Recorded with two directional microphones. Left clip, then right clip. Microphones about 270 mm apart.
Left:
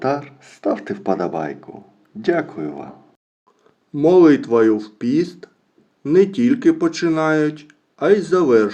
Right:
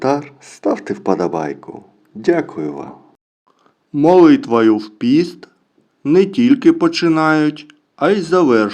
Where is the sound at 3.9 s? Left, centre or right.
Right.